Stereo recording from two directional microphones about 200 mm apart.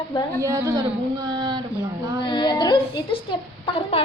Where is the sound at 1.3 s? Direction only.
20° right (ahead or behind).